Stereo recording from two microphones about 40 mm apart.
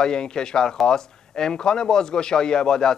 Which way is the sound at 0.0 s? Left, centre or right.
Centre.